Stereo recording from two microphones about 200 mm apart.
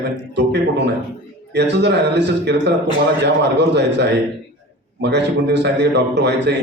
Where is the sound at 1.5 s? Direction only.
60° right (ahead or behind).